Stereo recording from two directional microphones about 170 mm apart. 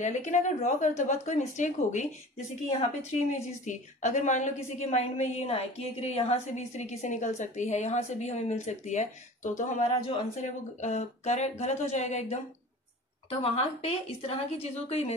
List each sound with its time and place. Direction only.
0.0 s speech: 45° left (ahead or behind)
3.6 s a woman's voice: 45° left (ahead or behind)